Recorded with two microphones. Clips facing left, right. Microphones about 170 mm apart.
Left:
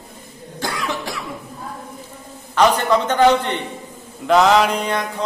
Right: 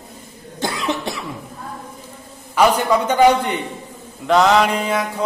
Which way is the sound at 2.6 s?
10° right (ahead or behind).